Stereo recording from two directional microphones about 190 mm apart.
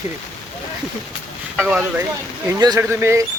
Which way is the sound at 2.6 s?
15° right (ahead or behind).